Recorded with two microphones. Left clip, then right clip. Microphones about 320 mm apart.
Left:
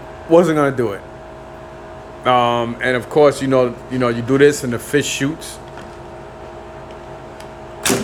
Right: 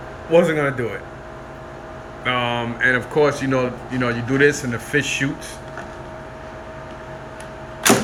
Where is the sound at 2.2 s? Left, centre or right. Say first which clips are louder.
Left 7 dB; centre.